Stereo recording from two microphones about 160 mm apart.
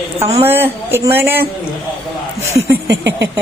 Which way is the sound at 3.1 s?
90° right.